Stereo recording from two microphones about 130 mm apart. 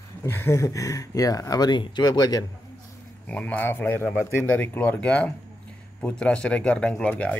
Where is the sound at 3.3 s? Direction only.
10° left (ahead or behind).